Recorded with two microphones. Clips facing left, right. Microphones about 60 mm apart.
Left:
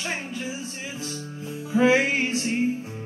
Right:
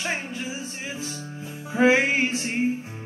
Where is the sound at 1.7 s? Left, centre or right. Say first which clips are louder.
Even; right.